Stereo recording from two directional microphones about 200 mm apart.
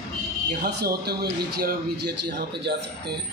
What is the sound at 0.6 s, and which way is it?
A man's voice, 55° right (ahead or behind).